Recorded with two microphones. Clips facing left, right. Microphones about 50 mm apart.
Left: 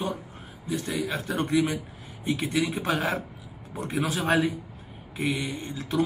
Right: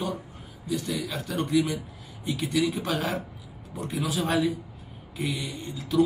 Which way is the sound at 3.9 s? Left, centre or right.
Left.